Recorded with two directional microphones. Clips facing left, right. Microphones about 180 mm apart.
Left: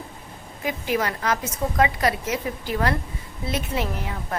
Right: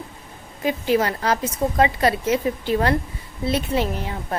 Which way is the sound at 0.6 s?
30° right (ahead or behind).